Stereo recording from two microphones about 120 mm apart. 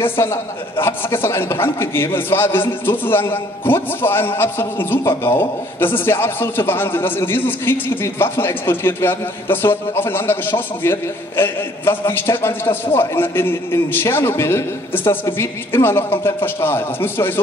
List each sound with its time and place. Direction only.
0.0 s a man's voice: 20° left (ahead or behind)